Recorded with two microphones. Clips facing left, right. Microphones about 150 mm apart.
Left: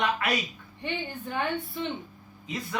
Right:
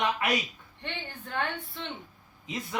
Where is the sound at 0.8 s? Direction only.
10° left (ahead or behind).